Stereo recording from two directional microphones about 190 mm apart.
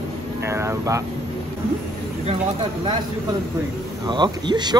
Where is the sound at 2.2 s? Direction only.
25° right (ahead or behind).